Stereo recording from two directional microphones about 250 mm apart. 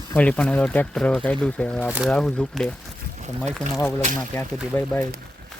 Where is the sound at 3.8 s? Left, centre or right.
Centre.